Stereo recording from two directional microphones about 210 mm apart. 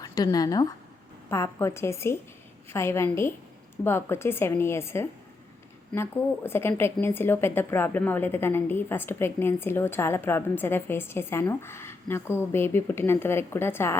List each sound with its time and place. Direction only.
0.0 s a woman's voice: 15° left (ahead or behind)